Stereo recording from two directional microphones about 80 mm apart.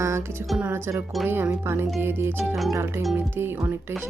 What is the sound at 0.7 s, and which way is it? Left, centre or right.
Speech, right.